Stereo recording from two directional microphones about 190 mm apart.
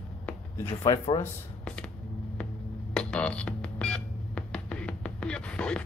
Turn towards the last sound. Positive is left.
turn(degrees=5)  # may be behind; listen again after turning